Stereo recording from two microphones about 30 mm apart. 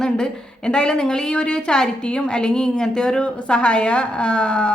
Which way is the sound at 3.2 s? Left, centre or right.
Left.